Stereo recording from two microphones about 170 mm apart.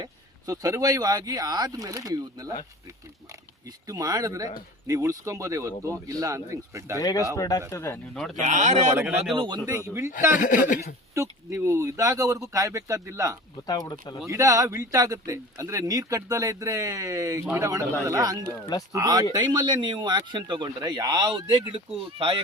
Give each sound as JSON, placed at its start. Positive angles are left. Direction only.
{"t": 0.0, "sound": "speech", "side_deg": -20}
{"t": 3.8, "sound": "speech", "side_deg": -20}
{"t": 7.0, "sound": "speech", "side_deg": 20}
{"t": 8.1, "sound": "speech", "side_deg": 5}
{"t": 8.4, "sound": "speech", "side_deg": -45}
{"t": 9.3, "sound": "speech", "side_deg": -30}
{"t": 10.3, "sound": "speech", "side_deg": 50}
{"t": 11.1, "sound": "speech", "side_deg": -15}
{"t": 13.7, "sound": "speech", "side_deg": 20}
{"t": 14.3, "sound": "speech", "side_deg": -20}